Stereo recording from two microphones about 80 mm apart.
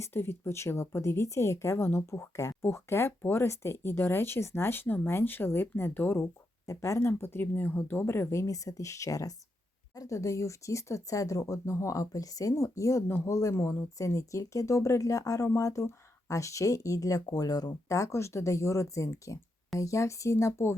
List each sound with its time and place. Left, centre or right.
0.0 s speech: left
6.7 s speech: left
7.1 s speech: left